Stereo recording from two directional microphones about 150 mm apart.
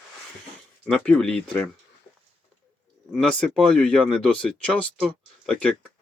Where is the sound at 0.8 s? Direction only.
5° left (ahead or behind).